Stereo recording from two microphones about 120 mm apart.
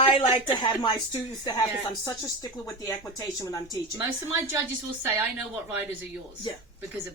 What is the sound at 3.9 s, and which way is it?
Speech, 20° right (ahead or behind).